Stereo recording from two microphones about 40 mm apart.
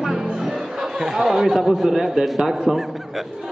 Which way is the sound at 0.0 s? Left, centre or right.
Centre.